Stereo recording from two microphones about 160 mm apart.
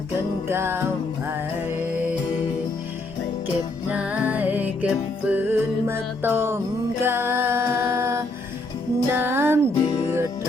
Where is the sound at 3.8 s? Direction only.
10° right (ahead or behind).